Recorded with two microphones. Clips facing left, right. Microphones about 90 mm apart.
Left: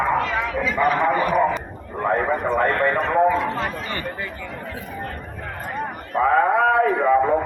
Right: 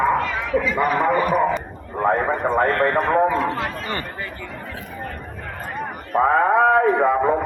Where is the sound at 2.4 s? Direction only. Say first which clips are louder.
Right 4 dB; 25° right (ahead or behind).